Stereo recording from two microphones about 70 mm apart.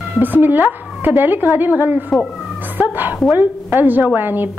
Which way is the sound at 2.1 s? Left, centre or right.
Centre.